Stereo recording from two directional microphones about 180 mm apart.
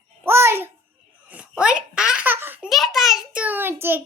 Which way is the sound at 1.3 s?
5° right (ahead or behind).